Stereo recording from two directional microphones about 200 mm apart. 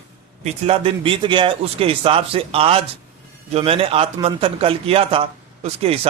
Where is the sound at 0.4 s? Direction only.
30° right (ahead or behind).